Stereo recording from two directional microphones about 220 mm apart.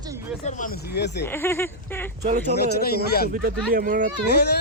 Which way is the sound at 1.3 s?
10° left (ahead or behind).